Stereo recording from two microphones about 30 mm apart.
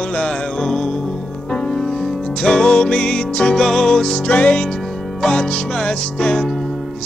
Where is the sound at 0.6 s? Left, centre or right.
Centre.